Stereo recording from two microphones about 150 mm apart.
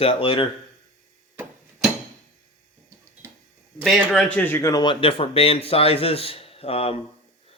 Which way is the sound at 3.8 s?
Centre (ahead or behind).